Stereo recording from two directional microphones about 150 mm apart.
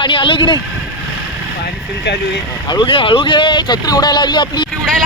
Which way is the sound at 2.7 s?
35° left (ahead or behind).